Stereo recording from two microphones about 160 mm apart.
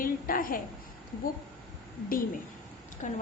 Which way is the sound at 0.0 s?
60° left (ahead or behind).